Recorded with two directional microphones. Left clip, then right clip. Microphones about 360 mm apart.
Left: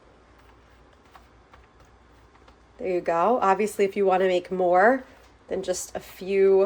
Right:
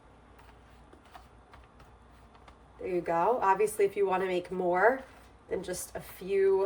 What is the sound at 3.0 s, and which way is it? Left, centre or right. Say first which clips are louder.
Speech: left 5 dB; left.